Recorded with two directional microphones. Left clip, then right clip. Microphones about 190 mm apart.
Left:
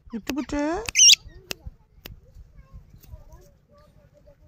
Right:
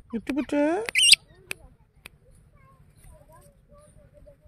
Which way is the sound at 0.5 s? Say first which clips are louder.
Right 3 dB; 20° right (ahead or behind).